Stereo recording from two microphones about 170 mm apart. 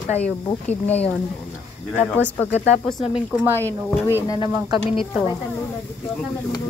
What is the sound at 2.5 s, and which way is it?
Speech, 35° left (ahead or behind).